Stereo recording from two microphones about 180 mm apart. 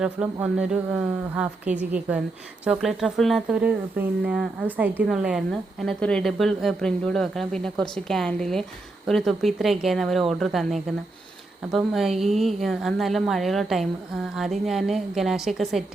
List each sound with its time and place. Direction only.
0.0 s a woman's voice: 5° right (ahead or behind)
11.9 s speech: centre (ahead or behind)